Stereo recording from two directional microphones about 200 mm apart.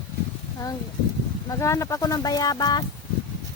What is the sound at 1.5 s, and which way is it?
Speech, 15° left (ahead or behind).